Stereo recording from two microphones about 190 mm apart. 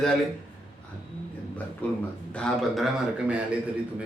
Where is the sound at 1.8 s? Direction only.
10° left (ahead or behind).